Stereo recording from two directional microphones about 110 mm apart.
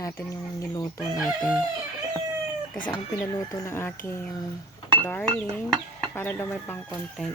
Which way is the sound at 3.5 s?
25° left (ahead or behind).